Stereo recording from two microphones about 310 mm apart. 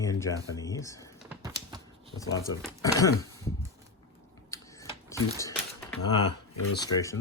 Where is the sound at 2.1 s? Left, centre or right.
Centre.